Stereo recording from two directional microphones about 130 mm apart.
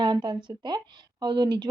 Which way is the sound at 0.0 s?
35° right (ahead or behind).